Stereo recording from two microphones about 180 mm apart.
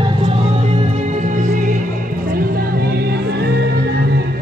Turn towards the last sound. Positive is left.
turn(degrees=-60)  # may be behind; listen again after turning